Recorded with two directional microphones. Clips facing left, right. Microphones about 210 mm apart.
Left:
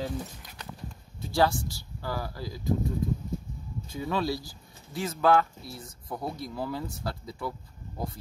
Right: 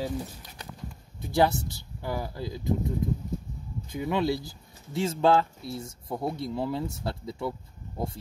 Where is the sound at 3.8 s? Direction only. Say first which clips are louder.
Right 3 dB; 20° right (ahead or behind).